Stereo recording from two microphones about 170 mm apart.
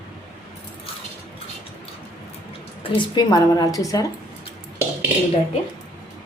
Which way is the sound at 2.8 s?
25° left (ahead or behind).